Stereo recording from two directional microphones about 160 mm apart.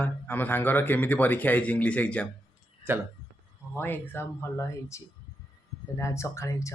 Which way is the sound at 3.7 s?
15° left (ahead or behind).